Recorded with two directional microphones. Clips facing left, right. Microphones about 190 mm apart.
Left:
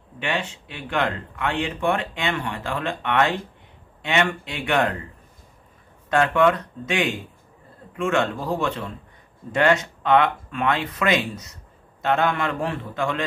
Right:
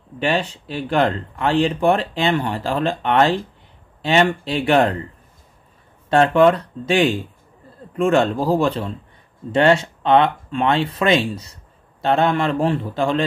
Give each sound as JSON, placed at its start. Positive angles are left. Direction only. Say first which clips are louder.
{"t": 0.2, "sound": "speech", "louder": "right 6 dB", "side_deg": -35}
{"t": 6.0, "sound": "speech", "louder": "right 5 dB", "side_deg": -30}